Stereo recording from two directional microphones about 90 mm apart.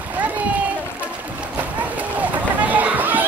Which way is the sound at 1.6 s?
15° right (ahead or behind).